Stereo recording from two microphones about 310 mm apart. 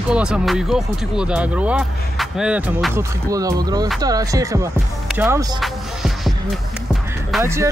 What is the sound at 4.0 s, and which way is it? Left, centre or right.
Music, centre.